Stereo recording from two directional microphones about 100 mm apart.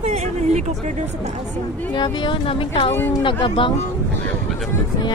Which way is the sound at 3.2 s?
55° left (ahead or behind).